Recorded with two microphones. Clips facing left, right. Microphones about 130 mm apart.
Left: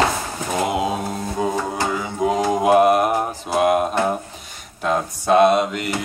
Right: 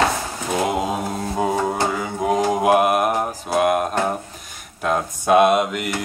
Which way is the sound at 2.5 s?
5° right (ahead or behind).